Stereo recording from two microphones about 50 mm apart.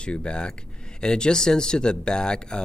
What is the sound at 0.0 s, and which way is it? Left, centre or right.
Speech, centre.